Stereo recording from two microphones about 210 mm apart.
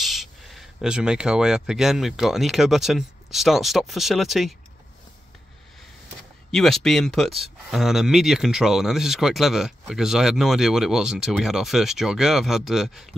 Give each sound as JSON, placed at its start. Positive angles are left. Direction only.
{"t": 0.0, "sound": "speech", "side_deg": 0}
{"t": 6.5, "sound": "speech", "side_deg": 0}